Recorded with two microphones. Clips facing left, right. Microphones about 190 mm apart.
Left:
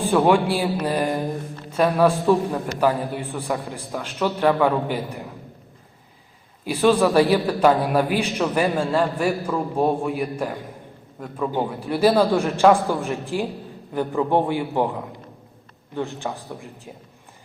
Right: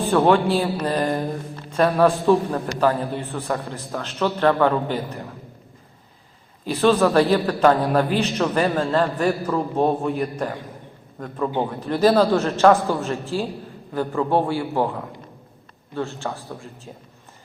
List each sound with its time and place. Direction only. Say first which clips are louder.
0.1 s a man's voice: right 1 dB; 10° left (ahead or behind)
6.7 s a man's voice: even; 10° left (ahead or behind)